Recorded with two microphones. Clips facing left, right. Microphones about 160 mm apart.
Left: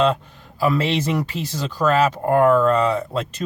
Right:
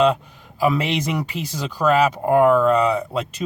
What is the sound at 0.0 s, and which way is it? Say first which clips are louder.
Speech: right 1 dB; 10° right (ahead or behind).